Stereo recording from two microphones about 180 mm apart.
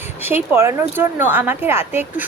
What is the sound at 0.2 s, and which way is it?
A woman's voice, 10° right (ahead or behind).